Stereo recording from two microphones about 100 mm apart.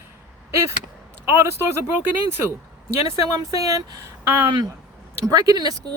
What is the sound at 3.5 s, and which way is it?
Speech, 35° right (ahead or behind).